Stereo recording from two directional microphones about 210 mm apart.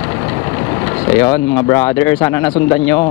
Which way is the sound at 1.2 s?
15° left (ahead or behind).